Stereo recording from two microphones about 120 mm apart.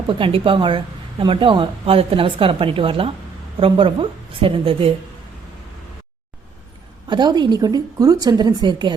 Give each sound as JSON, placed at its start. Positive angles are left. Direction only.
{"t": 0.1, "sound": "speech", "side_deg": -45}
{"t": 7.1, "sound": "a woman's voice", "side_deg": -40}